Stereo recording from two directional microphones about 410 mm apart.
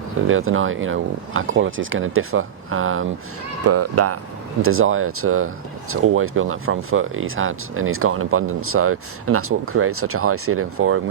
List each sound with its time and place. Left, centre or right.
0.3 s speech: right